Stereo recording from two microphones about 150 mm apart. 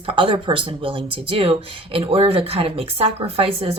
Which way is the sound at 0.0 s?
35° right (ahead or behind).